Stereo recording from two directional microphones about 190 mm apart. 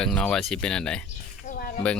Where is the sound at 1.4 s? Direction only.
50° left (ahead or behind).